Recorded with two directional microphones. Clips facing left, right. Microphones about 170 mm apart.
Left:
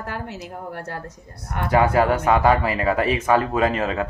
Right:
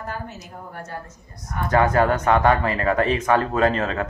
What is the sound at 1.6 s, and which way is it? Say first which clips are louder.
Speech: left 1 dB; 10° left (ahead or behind).